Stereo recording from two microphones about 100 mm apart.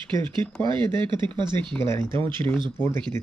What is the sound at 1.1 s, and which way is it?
Speech, 50° right (ahead or behind).